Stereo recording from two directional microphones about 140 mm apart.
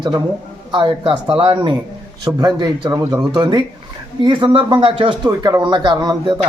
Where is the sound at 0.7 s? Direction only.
35° right (ahead or behind).